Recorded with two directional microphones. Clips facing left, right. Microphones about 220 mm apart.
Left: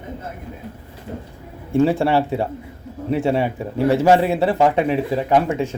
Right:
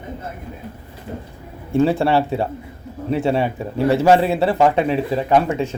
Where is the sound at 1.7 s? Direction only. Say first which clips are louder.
Even; 15° left (ahead or behind).